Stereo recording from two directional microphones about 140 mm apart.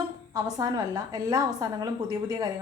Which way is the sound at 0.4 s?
25° right (ahead or behind).